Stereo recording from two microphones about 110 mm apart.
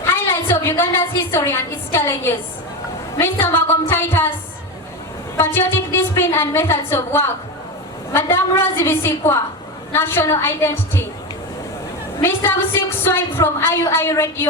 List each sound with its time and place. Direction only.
0.1 s a woman's voice: 20° left (ahead or behind)
5.4 s a woman's voice: 20° left (ahead or behind)
12.2 s a woman's voice: 20° left (ahead or behind)